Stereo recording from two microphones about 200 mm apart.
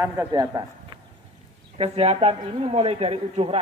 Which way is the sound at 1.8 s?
30° right (ahead or behind).